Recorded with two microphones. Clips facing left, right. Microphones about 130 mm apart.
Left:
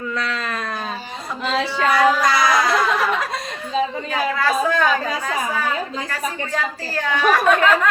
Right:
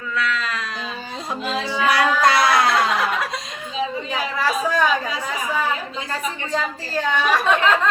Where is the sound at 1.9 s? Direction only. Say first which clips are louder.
Even; 65° right (ahead or behind).